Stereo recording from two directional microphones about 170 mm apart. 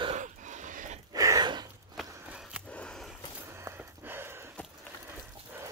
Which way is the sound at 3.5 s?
15° right (ahead or behind).